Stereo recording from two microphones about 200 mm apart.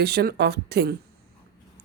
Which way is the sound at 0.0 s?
50° right (ahead or behind).